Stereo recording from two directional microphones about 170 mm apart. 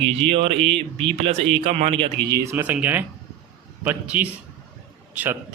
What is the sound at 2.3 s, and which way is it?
Speech, 15° right (ahead or behind).